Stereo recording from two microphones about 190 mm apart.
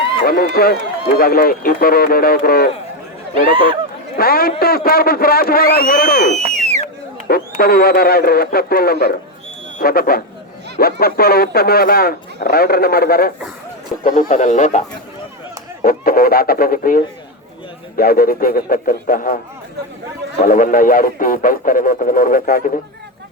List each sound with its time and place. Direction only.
0.3 s speech: 50° left (ahead or behind)
4.2 s speech: 50° left (ahead or behind)
6.4 s a sound: 35° right (ahead or behind)
6.8 s speech: 50° left (ahead or behind)
14.0 s speech: 40° left (ahead or behind)
20.4 s speech: 45° left (ahead or behind)